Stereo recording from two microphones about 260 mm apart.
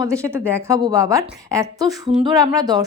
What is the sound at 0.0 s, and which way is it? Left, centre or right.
A woman's voice, centre.